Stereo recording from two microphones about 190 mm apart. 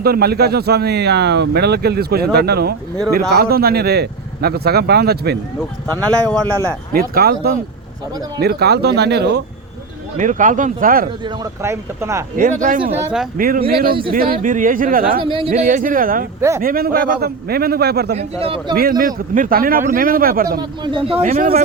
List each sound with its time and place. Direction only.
0.0 s speech: 55° right (ahead or behind)
6.9 s a man's voice: 50° right (ahead or behind)
10.2 s a man's voice: 40° right (ahead or behind)
11.6 s speech: 15° right (ahead or behind)
12.4 s a man's voice: 45° right (ahead or behind)
13.0 s speech: 10° right (ahead or behind)
13.3 s a man's voice: 50° right (ahead or behind)
15.2 s speech: 25° right (ahead or behind); by 16.2 s 45° right (ahead or behind)
16.4 s speech: 15° right (ahead or behind)
16.6 s speech: 50° right (ahead or behind)
18.2 s speech: 30° right (ahead or behind)
18.7 s a man's voice: 50° right (ahead or behind)
20.6 s speech: 25° right (ahead or behind)